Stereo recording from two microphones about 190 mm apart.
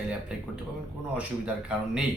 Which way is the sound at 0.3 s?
5° right (ahead or behind).